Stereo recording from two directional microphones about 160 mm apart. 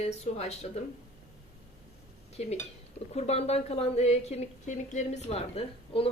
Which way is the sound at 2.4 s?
40° left (ahead or behind).